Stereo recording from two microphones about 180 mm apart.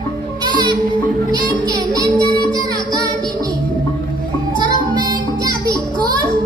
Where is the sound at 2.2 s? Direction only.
25° left (ahead or behind).